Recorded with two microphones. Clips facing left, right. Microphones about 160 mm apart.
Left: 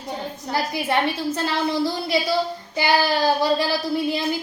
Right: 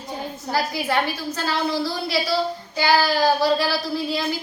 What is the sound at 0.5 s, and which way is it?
Speech, 25° left (ahead or behind).